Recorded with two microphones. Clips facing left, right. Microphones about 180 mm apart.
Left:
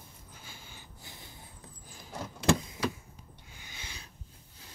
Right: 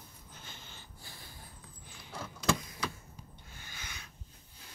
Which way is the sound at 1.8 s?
40° left (ahead or behind).